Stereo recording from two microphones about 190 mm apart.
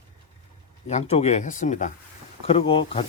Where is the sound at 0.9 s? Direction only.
35° left (ahead or behind).